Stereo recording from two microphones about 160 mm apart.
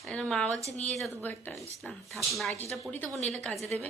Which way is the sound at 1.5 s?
Centre (ahead or behind).